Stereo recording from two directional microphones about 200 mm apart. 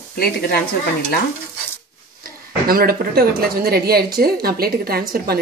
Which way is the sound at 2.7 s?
50° right (ahead or behind).